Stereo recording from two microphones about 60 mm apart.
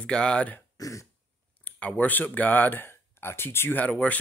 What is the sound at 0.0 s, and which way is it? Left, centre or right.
Speech, centre.